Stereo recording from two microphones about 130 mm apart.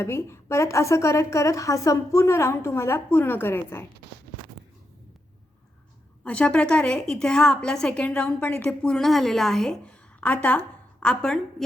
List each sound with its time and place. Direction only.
0.0 s a woman's voice: 20° left (ahead or behind)
6.2 s a woman's voice: 10° left (ahead or behind)